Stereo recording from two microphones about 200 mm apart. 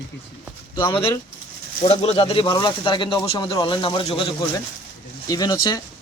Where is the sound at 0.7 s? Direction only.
25° left (ahead or behind).